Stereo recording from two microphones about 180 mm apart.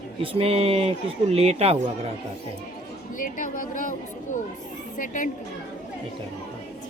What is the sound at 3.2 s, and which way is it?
A woman's voice, 50° left (ahead or behind).